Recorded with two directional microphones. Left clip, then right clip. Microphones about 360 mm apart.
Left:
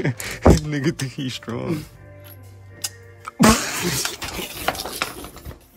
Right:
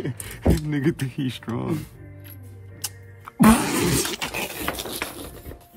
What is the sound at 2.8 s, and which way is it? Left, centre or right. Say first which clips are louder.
Music: left 5 dB; centre.